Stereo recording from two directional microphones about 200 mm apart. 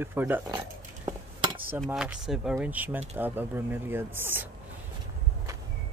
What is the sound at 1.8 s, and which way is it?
Speech, 5° right (ahead or behind).